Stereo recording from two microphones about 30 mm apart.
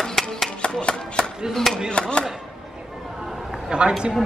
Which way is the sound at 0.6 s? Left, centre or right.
Left.